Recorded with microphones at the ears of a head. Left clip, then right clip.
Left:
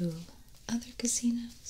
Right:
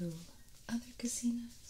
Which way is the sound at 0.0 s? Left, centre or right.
Left.